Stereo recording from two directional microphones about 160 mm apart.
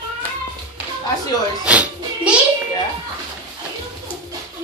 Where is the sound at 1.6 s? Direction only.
10° right (ahead or behind).